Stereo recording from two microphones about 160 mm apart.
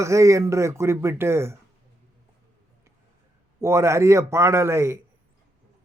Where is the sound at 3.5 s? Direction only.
15° right (ahead or behind).